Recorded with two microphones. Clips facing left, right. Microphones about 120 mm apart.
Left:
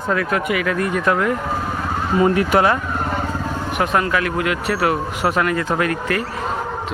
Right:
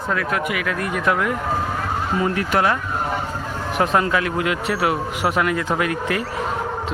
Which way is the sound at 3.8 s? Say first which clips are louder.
Even; 25° right (ahead or behind).